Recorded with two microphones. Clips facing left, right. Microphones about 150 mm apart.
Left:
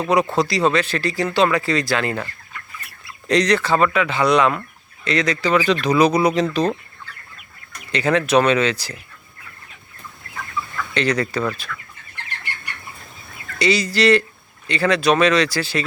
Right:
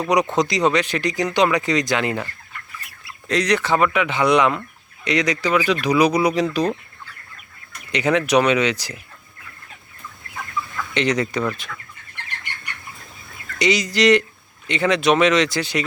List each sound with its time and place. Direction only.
0.0 s speech: 15° right (ahead or behind)
3.2 s speech: 10° right (ahead or behind)
7.9 s speech: 15° right (ahead or behind)
10.9 s speech: 20° right (ahead or behind)
13.6 s speech: 20° right (ahead or behind)